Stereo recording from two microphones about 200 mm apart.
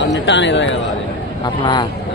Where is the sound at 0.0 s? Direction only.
65° left (ahead or behind).